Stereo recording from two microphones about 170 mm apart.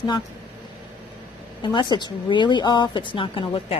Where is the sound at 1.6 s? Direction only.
25° left (ahead or behind).